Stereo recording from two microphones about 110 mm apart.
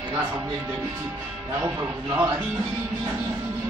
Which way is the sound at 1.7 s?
25° right (ahead or behind).